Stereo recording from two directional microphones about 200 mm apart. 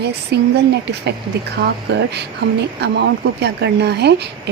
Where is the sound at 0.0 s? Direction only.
55° right (ahead or behind).